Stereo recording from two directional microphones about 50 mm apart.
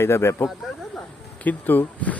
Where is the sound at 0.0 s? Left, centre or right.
Left.